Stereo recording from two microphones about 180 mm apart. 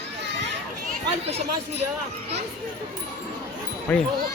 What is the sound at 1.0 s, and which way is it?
Speech, 35° right (ahead or behind).